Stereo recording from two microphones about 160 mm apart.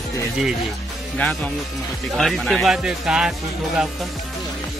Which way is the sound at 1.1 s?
10° left (ahead or behind).